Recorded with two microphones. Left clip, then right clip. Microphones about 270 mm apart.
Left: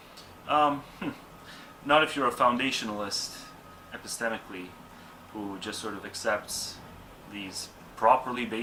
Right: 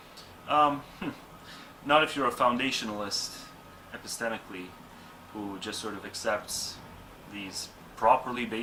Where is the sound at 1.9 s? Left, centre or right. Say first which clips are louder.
Left 1 dB; centre.